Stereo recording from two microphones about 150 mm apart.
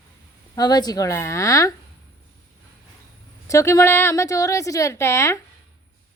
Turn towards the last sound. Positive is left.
turn(degrees=20)  # may be behind; listen again after turning